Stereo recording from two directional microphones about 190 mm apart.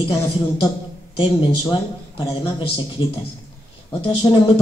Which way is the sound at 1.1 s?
25° left (ahead or behind).